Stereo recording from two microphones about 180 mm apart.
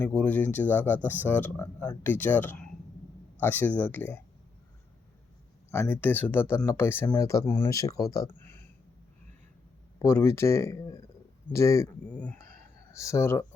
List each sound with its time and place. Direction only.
0.0 s speech: 10° left (ahead or behind)
5.7 s speech: 10° left (ahead or behind)
8.4 s a sound: 10° left (ahead or behind)
10.0 s speech: 15° left (ahead or behind)